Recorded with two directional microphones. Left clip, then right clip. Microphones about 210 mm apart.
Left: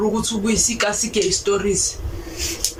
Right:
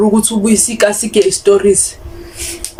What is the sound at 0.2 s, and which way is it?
Speech, 30° right (ahead or behind).